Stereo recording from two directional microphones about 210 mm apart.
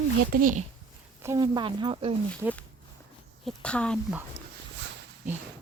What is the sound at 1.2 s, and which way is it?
Speech, 15° right (ahead or behind).